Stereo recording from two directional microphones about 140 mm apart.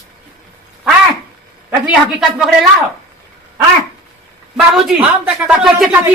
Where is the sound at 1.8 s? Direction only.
5° right (ahead or behind).